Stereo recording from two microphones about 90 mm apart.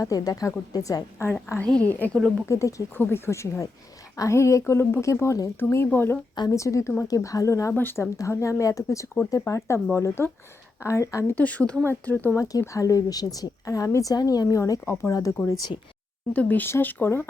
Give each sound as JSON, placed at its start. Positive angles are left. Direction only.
{"t": 0.0, "sound": "a woman's voice", "side_deg": 40}
{"t": 1.6, "sound": "a woman's voice", "side_deg": 15}
{"t": 2.5, "sound": "a woman's voice", "side_deg": 35}
{"t": 2.9, "sound": "a woman's voice", "side_deg": 25}
{"t": 6.5, "sound": "a woman's voice", "side_deg": 35}
{"t": 7.7, "sound": "speech", "side_deg": 20}
{"t": 8.1, "sound": "a woman's voice", "side_deg": 35}
{"t": 11.3, "sound": "a woman's voice", "side_deg": 15}
{"t": 12.4, "sound": "a woman's voice", "side_deg": 40}
{"t": 16.3, "sound": "speech", "side_deg": 15}